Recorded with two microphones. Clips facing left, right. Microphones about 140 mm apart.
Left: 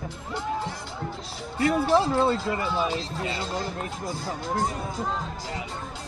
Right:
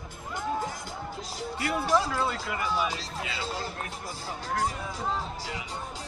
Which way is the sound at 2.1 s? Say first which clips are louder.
Left 7 dB; 30° left (ahead or behind).